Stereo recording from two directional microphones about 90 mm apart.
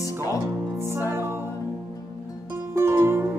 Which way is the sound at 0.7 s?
30° right (ahead or behind).